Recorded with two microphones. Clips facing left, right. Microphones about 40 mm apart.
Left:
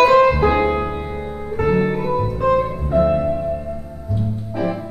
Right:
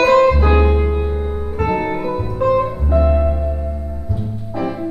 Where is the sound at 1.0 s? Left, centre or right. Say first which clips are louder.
Right 4 dB; centre.